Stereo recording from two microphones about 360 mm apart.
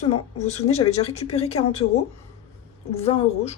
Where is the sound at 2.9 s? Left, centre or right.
Centre.